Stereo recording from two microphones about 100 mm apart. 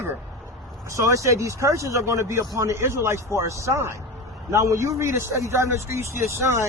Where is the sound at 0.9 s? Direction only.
35° right (ahead or behind).